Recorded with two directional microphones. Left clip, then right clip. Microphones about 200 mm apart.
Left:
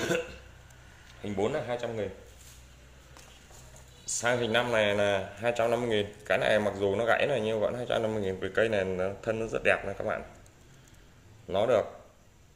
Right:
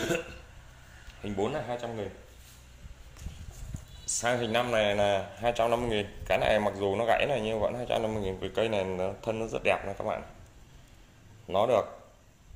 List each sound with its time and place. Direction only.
1.2 s speech: centre (ahead or behind)
4.0 s speech: centre (ahead or behind)
11.4 s speech: 5° left (ahead or behind)